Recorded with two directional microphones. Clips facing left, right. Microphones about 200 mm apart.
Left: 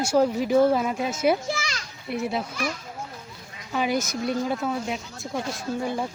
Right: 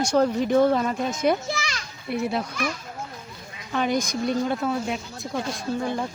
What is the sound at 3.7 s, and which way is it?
Speech, 5° left (ahead or behind).